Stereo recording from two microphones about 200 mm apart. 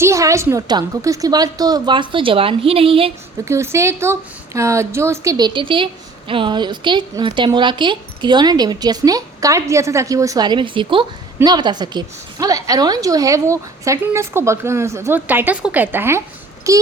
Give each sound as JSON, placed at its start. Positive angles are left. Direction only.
{"t": 0.0, "sound": "speech", "side_deg": -15}
{"t": 3.4, "sound": "a woman's voice", "side_deg": -15}